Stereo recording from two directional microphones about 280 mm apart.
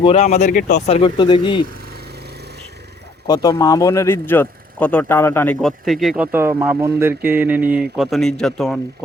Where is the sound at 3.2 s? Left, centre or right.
Centre.